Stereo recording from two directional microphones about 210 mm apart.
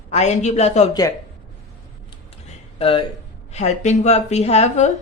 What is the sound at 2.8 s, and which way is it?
A woman's voice, 25° left (ahead or behind).